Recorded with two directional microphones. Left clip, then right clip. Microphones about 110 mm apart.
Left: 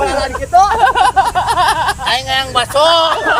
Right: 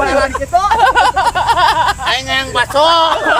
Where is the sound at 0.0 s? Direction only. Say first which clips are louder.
Right 2 dB; 35° right (ahead or behind).